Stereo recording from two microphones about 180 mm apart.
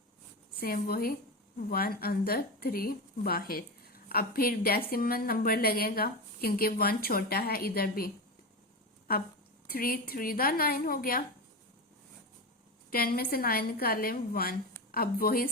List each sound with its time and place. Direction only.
0.6 s a woman's voice: 55° left (ahead or behind)
9.6 s a woman's voice: 55° left (ahead or behind)
12.9 s a woman's voice: 55° left (ahead or behind)